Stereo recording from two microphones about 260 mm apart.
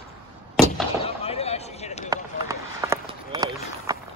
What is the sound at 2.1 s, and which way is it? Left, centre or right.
Run, centre.